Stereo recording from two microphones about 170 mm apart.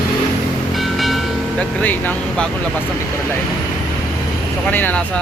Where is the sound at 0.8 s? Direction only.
Centre (ahead or behind).